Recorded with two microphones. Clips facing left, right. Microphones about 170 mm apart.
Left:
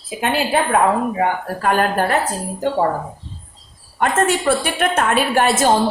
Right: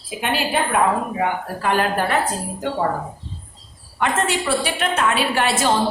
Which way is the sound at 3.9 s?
45° left (ahead or behind).